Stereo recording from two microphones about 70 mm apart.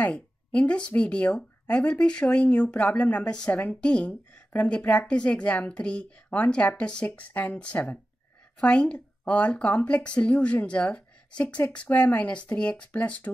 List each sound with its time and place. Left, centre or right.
0.0 s speech: centre